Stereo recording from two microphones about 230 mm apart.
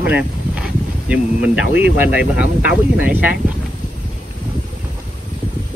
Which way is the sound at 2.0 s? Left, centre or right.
Centre.